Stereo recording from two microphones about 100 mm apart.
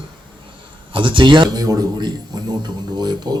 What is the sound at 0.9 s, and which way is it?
A man's voice, 55° right (ahead or behind).